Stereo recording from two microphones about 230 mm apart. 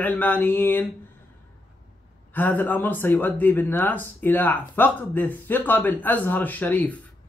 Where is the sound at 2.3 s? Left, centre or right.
Centre.